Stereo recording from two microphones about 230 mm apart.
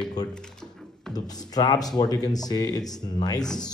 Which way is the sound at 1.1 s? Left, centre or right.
Centre.